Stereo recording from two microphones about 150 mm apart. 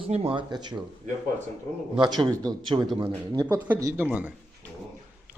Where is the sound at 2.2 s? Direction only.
30° right (ahead or behind); by 4.3 s 10° right (ahead or behind).